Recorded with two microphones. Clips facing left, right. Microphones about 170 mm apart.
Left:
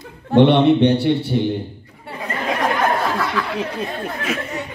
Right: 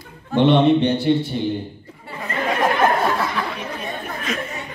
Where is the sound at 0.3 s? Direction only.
65° left (ahead or behind).